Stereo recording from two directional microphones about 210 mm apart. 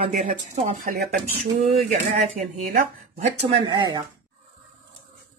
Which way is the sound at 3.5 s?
20° right (ahead or behind).